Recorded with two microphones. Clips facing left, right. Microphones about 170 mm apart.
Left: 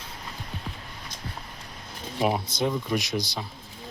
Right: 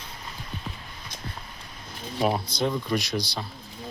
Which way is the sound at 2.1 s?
10° left (ahead or behind).